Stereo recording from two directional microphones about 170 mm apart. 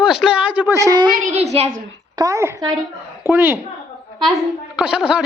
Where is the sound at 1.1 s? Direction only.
45° right (ahead or behind).